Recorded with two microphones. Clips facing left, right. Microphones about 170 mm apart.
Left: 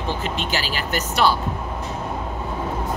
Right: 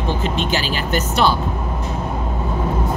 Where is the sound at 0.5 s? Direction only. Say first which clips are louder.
Right 4 dB; 20° right (ahead or behind).